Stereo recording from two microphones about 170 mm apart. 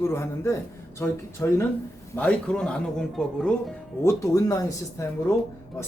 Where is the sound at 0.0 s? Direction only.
15° left (ahead or behind).